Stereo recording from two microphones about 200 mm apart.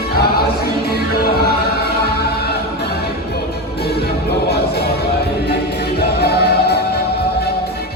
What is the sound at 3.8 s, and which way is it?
Music, 55° left (ahead or behind).